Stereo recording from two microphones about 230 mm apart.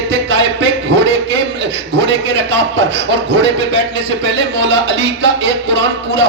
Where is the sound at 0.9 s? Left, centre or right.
Right.